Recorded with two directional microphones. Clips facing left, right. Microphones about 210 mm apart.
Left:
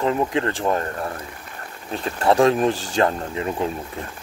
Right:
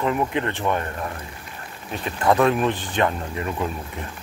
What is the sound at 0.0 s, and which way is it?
Speech, 30° left (ahead or behind).